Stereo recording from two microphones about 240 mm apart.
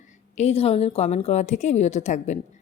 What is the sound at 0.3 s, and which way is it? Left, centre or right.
A woman's voice, left.